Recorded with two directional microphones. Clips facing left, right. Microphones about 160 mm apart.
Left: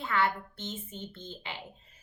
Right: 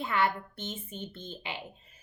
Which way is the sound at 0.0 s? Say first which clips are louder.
Right 1 dB; 15° right (ahead or behind).